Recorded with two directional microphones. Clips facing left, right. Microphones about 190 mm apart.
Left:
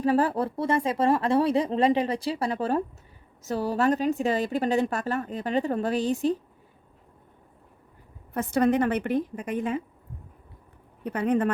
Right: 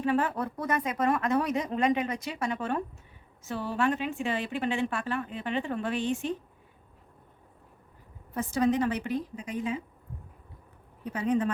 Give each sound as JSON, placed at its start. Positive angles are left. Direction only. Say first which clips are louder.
{"t": 0.0, "sound": "a woman's voice", "louder": "left 4 dB", "side_deg": 35}
{"t": 8.3, "sound": "a woman's voice", "louder": "left 3 dB", "side_deg": 60}
{"t": 11.0, "sound": "a woman's voice", "louder": "left 3 dB", "side_deg": 60}